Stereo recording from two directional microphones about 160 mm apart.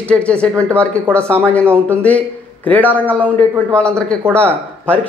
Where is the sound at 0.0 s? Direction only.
5° left (ahead or behind).